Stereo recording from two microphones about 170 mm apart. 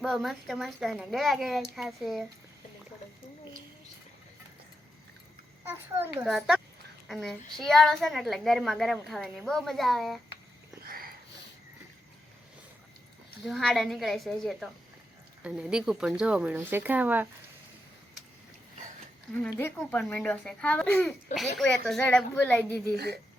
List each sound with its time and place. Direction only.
0.0 s a child's voice: centre (ahead or behind)
5.6 s speech: 15° right (ahead or behind)
6.2 s a child's voice: centre (ahead or behind)
10.8 s sniff: 60° right (ahead or behind)
13.4 s a child's voice: centre (ahead or behind)
19.5 s a child's voice: 15° left (ahead or behind)